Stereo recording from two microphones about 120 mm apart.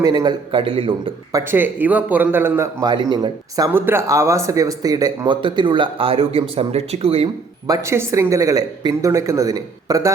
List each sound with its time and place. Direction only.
0.0 s speech: 35° right (ahead or behind)
0.5 s a man's voice: 45° right (ahead or behind)
1.3 s speech: 25° right (ahead or behind)
1.5 s a man's voice: 15° right (ahead or behind)
2.8 s speech: 35° right (ahead or behind)
3.7 s speech: 20° right (ahead or behind); by 7.3 s 55° right (ahead or behind)
7.7 s speech: 25° right (ahead or behind)